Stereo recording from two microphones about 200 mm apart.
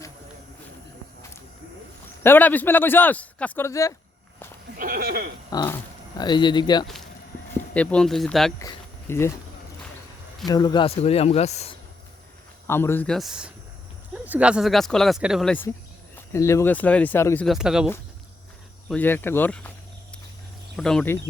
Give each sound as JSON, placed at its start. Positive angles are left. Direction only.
{"t": 2.2, "sound": "a man's voice", "side_deg": 10}
{"t": 4.8, "sound": "speech", "side_deg": -45}
{"t": 5.5, "sound": "speech", "side_deg": 15}
{"t": 7.7, "sound": "speech", "side_deg": 5}
{"t": 8.5, "sound": "a sound", "side_deg": 15}
{"t": 10.4, "sound": "speech", "side_deg": 20}
{"t": 12.6, "sound": "a man's voice", "side_deg": 10}
{"t": 17.4, "sound": "speech", "side_deg": 0}
{"t": 18.9, "sound": "a man's voice", "side_deg": 10}
{"t": 20.7, "sound": "speech", "side_deg": 5}